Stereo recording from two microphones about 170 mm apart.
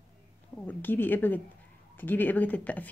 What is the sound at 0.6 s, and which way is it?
Speech, 10° left (ahead or behind).